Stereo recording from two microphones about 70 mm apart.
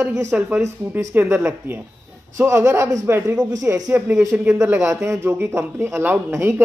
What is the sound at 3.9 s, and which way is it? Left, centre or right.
Speech, right.